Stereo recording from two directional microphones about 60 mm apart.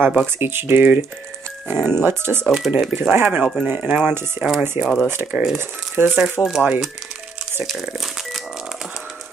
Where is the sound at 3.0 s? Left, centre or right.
Right.